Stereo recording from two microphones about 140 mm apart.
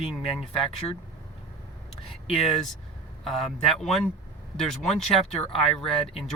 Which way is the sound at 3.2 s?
Centre (ahead or behind).